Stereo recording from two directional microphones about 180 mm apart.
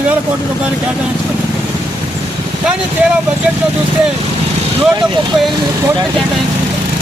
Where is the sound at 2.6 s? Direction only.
5° right (ahead or behind).